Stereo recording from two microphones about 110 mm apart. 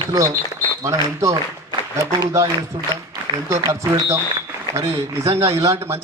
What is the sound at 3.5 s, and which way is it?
A man's voice, 30° right (ahead or behind).